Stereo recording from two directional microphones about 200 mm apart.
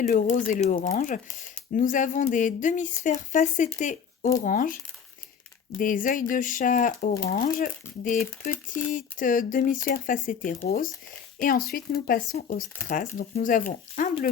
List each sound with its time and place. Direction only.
0.3 s speech: 40° left (ahead or behind)
3.8 s shuffling cards: 40° left (ahead or behind)
4.4 s speech: 40° left (ahead or behind)
5.8 s speech: 40° left (ahead or behind)